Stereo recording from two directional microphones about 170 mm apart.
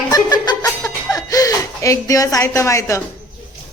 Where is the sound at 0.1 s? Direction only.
20° left (ahead or behind).